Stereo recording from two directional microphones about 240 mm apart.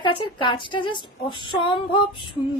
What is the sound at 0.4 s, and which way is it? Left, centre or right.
A woman's voice, centre.